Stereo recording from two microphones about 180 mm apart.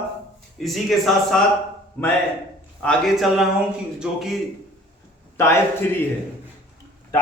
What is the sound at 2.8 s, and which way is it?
Speech, centre (ahead or behind).